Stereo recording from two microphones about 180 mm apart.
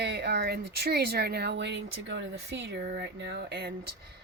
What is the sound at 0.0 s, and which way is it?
Speech, 70° right (ahead or behind).